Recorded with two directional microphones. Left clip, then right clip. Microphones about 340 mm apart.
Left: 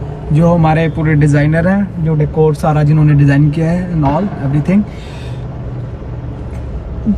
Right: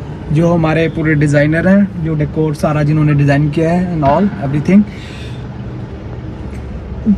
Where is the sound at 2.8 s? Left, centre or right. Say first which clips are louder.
Even; centre.